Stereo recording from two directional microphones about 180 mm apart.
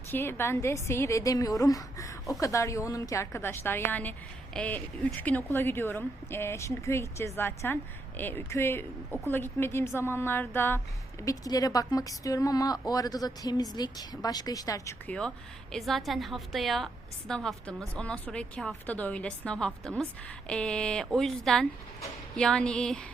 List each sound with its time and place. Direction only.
0.1 s a woman's voice: 10° left (ahead or behind)
15.7 s a woman's voice: centre (ahead or behind)